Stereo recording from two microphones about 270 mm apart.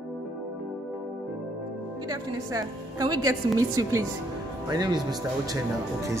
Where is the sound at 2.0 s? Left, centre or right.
Centre.